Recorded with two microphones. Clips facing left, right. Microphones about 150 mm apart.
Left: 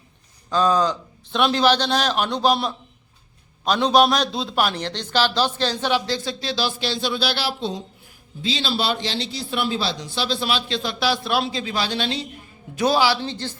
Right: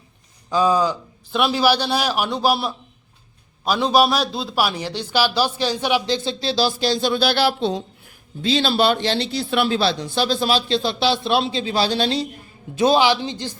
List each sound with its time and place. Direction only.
0.5 s a man's voice: 10° right (ahead or behind); by 12.3 s 35° right (ahead or behind)
12.7 s speech: 20° right (ahead or behind)